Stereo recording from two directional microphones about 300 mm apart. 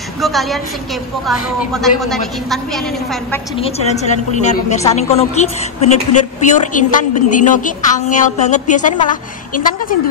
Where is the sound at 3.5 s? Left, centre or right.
Centre.